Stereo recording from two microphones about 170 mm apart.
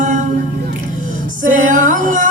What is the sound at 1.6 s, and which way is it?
Female singing, 50° right (ahead or behind).